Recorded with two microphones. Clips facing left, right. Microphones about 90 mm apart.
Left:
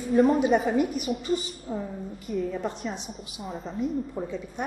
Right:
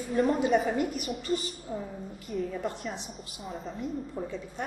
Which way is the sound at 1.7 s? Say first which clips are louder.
Left 4 dB; 20° left (ahead or behind).